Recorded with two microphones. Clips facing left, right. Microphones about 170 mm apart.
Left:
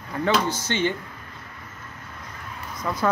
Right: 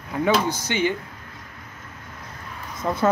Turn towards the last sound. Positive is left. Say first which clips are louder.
# right 3 dB
turn(degrees=-25)  # may be behind; listen again after turning